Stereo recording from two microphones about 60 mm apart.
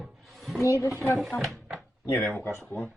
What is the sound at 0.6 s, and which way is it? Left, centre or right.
Speech, left.